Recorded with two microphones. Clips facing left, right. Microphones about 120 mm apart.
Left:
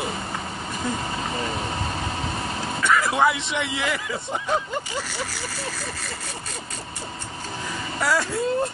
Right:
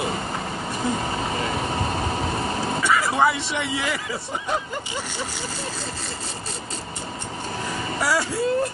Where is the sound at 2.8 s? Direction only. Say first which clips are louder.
Left 1 dB; 5° right (ahead or behind).